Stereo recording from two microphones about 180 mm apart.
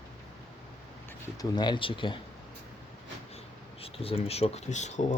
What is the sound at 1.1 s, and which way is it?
Speech, 20° left (ahead or behind).